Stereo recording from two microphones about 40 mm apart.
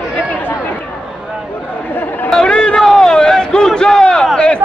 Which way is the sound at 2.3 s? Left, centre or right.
Centre.